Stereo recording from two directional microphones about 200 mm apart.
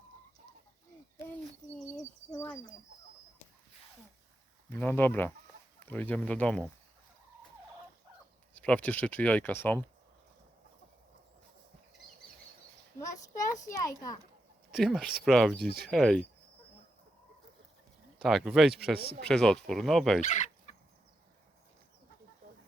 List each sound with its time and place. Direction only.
2.3 s speech: 10° left (ahead or behind)
4.7 s speech: 10° left (ahead or behind)
8.5 s speech: 5° left (ahead or behind)
13.0 s a child's voice: 15° left (ahead or behind)
14.7 s speech: centre (ahead or behind)
15.5 s speech: 50° right (ahead or behind)
15.9 s speech: centre (ahead or behind)
18.2 s speech: centre (ahead or behind)
20.3 s fowl: 35° left (ahead or behind)